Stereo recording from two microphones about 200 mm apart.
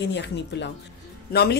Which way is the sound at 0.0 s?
60° left (ahead or behind).